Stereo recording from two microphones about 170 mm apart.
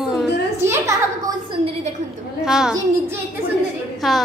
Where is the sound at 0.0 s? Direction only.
Centre (ahead or behind).